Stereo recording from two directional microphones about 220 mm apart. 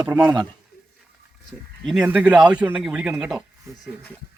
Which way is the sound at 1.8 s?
5° right (ahead or behind).